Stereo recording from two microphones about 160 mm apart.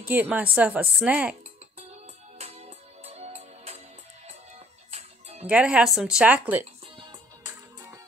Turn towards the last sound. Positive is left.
turn(degrees=-10)  # may be behind; listen again after turning